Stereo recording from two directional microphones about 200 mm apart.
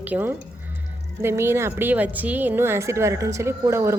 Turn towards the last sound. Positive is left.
turn(degrees=-15)  # may be behind; listen again after turning